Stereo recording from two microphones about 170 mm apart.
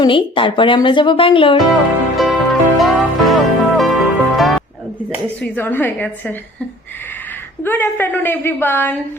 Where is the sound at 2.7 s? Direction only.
Centre (ahead or behind).